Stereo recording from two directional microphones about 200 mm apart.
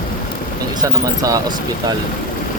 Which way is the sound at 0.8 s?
15° right (ahead or behind).